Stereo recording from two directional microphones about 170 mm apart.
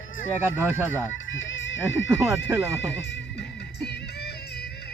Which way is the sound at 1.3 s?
90° left.